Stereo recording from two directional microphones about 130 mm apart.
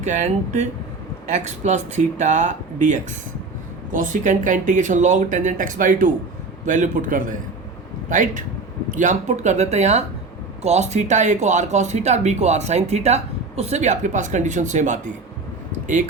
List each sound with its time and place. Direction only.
0.0 s speech: 65° right (ahead or behind)
3.9 s speech: 85° right
6.7 s a man's voice: 75° right (ahead or behind)